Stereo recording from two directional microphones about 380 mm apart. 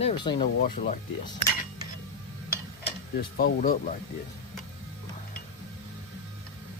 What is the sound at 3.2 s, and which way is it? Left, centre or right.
Speech, left.